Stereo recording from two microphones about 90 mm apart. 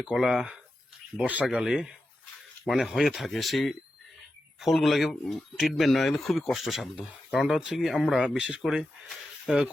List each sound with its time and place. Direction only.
0.2 s speech: 5° right (ahead or behind)
1.5 s speech: 5° right (ahead or behind)